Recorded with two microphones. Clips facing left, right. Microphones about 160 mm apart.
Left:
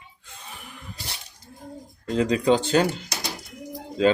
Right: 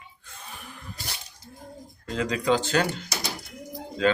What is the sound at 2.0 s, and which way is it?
Speech, 30° left (ahead or behind).